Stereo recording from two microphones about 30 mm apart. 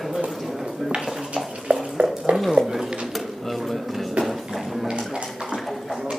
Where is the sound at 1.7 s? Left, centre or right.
Right.